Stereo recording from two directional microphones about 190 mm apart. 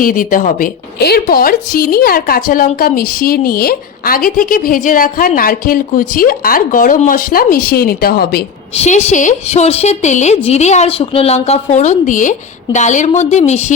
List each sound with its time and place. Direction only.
0.0 s a woman's voice: 45° left (ahead or behind)
8.7 s a woman's voice: 35° left (ahead or behind)